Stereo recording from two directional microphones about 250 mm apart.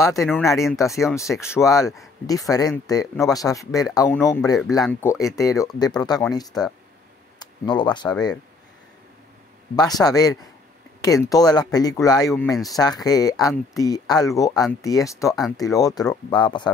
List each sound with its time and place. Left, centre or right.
0.2 s speech: centre
9.8 s speech: centre